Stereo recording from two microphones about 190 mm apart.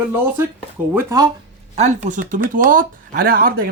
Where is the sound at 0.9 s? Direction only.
20° right (ahead or behind).